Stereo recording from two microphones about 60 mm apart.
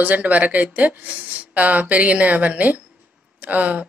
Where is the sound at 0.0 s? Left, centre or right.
Right.